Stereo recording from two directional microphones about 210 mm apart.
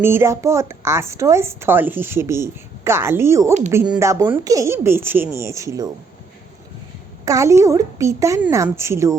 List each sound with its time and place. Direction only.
0.0 s a woman's voice: 10° right (ahead or behind)
7.3 s a woman's voice: 15° right (ahead or behind)